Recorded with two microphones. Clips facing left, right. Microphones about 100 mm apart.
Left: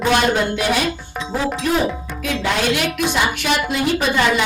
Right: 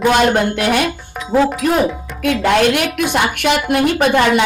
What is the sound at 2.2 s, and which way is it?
A woman's voice, 55° right (ahead or behind).